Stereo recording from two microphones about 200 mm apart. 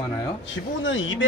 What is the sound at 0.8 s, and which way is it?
Speech, 75° left (ahead or behind).